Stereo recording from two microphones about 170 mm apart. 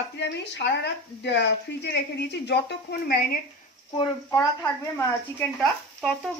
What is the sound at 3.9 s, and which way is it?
Speech, 30° left (ahead or behind).